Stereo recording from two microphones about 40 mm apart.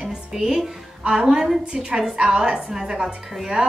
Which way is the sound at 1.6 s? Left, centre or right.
Right.